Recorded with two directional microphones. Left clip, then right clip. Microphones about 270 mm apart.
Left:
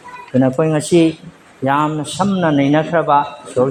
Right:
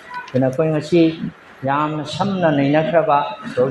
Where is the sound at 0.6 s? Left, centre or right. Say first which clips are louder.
Left 1 dB; left.